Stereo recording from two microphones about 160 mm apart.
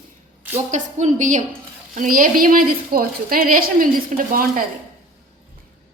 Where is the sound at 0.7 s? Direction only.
50° right (ahead or behind).